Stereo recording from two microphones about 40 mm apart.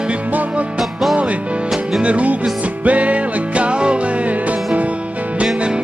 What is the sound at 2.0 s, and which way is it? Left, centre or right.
Music, right.